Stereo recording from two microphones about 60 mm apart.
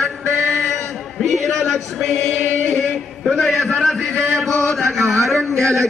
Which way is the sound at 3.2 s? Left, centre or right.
Centre.